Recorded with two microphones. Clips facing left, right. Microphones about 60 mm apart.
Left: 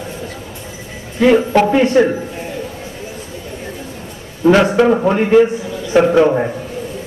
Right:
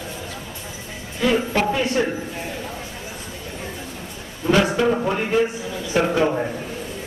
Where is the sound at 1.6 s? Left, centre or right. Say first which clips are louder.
Left 9 dB; left.